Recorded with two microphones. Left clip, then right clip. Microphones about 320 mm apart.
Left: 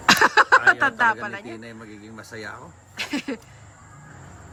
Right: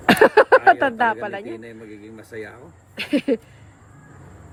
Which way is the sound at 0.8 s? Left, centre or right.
Centre.